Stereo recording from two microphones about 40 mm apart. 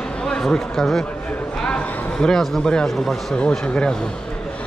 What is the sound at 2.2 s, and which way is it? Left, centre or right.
Speech, centre.